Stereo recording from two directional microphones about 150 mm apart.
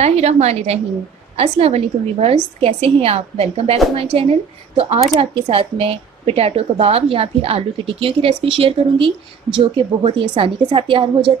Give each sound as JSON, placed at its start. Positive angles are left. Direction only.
{"t": 0.0, "sound": "a woman's voice", "side_deg": -45}